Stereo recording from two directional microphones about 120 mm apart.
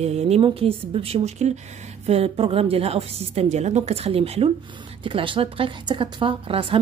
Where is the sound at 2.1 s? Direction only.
55° right (ahead or behind).